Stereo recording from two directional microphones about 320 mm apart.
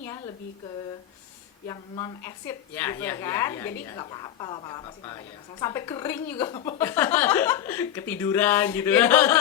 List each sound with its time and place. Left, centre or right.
1.6 s a woman's voice: centre